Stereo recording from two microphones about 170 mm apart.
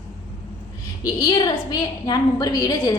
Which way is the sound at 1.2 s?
25° left (ahead or behind).